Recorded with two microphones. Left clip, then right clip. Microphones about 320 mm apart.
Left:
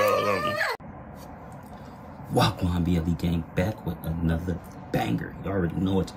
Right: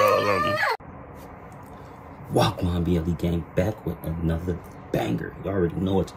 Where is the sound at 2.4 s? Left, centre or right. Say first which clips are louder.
Right 2 dB; centre.